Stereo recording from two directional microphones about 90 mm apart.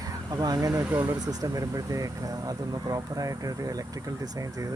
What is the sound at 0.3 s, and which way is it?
Speech, 45° right (ahead or behind).